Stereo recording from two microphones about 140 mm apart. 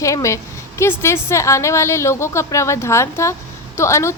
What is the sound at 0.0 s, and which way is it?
A woman's voice, 20° left (ahead or behind).